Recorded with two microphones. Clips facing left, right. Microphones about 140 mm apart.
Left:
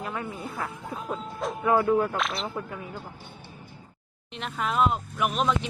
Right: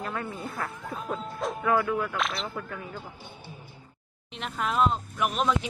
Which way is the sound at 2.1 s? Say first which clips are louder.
Left 1 dB; centre (ahead or behind).